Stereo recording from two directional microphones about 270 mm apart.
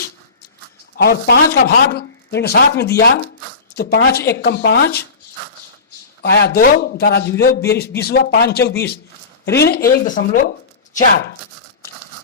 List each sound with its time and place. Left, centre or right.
0.9 s speech: left
6.2 s speech: left